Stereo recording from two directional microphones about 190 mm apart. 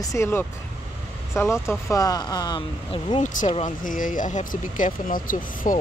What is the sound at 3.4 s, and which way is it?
Speech, 35° left (ahead or behind).